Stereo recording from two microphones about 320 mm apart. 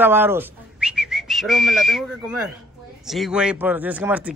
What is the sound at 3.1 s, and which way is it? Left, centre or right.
Speech, centre.